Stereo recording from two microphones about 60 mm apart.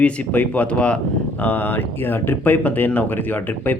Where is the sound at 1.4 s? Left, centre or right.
Left.